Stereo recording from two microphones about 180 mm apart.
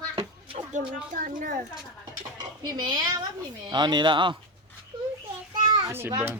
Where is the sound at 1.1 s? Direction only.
50° right (ahead or behind).